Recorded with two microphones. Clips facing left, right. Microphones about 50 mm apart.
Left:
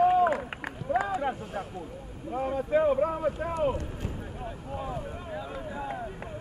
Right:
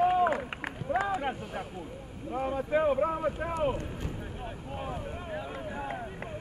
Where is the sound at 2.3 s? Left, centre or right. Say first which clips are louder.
Left 2 dB; centre.